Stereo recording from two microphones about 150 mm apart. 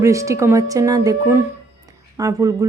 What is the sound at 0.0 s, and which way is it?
Speech, 20° right (ahead or behind).